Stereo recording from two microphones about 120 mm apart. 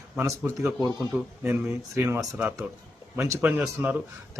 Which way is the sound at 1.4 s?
20° right (ahead or behind).